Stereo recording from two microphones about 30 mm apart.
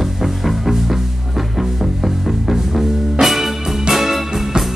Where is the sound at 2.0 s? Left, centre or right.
Centre.